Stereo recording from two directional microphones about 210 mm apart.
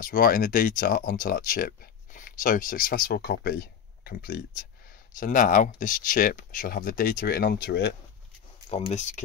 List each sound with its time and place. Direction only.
0.0 s speech: 40° left (ahead or behind)
8.6 s speech: 30° left (ahead or behind)